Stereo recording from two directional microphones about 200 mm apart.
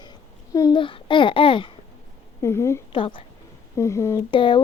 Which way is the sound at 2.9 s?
25° left (ahead or behind).